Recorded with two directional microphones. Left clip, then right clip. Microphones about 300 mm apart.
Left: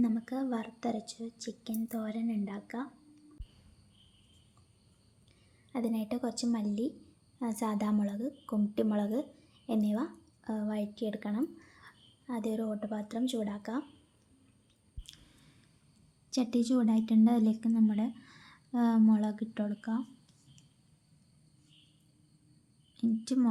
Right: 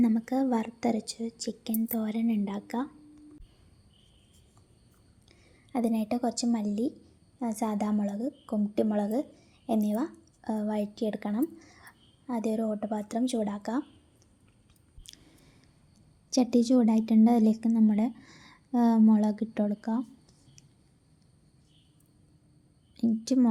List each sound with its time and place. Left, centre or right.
0.0 s speech: centre
5.3 s a woman's voice: centre
15.1 s a sound: centre
16.3 s speech: centre
23.0 s speech: centre